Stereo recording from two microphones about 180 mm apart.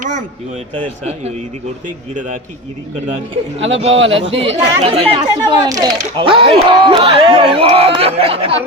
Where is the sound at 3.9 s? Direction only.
90° right.